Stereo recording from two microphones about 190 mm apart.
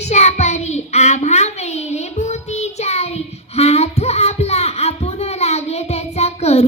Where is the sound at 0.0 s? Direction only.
35° left (ahead or behind).